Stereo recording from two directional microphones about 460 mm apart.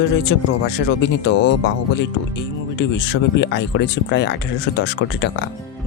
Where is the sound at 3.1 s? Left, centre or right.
Left.